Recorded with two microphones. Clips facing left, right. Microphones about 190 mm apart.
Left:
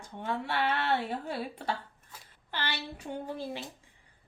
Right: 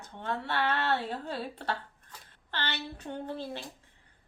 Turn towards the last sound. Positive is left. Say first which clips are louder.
# even
turn(degrees=10)  # may be behind; listen again after turning